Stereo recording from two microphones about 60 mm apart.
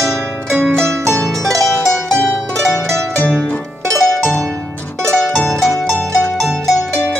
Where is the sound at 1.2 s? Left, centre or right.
Centre.